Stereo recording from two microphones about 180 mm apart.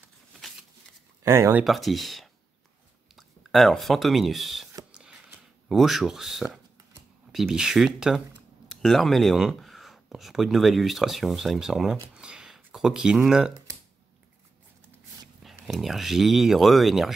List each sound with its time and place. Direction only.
1.2 s speech: 15° right (ahead or behind)
1.6 s speech: centre (ahead or behind)
4.9 s a sound: 5° right (ahead or behind)
5.7 s speech: centre (ahead or behind)
15.4 s speech: centre (ahead or behind)